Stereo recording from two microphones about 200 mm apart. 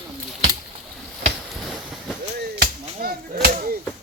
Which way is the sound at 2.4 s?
50° right (ahead or behind).